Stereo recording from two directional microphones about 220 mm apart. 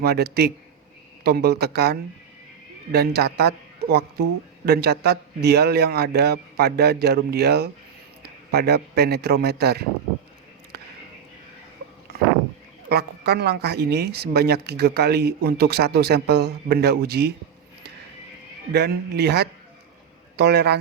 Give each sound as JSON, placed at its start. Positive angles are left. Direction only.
{"t": 0.0, "sound": "a man's voice", "side_deg": -45}
{"t": 12.9, "sound": "speech", "side_deg": -45}
{"t": 18.7, "sound": "a man's voice", "side_deg": -50}